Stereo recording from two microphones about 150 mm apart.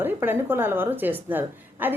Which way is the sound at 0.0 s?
15° right (ahead or behind).